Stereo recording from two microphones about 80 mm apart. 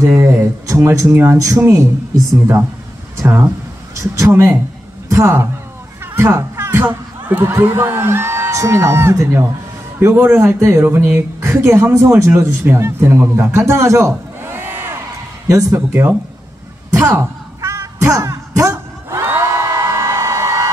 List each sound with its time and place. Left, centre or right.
0.0 s a man's voice: right
3.2 s a man's voice: right
17.0 s a sound: right